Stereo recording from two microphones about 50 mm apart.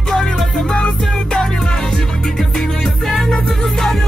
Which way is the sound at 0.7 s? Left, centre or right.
Centre.